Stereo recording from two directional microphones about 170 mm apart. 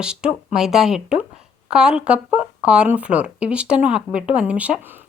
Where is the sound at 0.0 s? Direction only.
5° right (ahead or behind).